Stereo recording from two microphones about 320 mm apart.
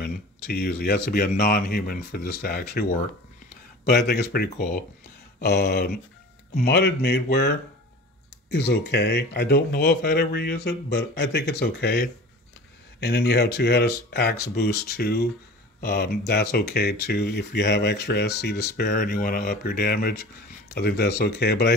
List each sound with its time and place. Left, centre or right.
0.0 s speech: left
3.9 s speech: left